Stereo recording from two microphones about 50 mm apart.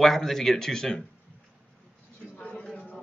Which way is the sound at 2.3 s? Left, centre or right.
Centre.